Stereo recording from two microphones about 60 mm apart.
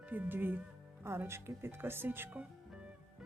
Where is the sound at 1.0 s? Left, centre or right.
Right.